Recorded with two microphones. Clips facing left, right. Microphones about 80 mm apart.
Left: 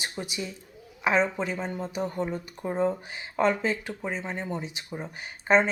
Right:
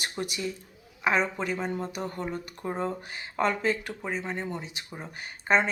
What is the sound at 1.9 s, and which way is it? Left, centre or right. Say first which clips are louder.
Speech: left 3 dB; centre.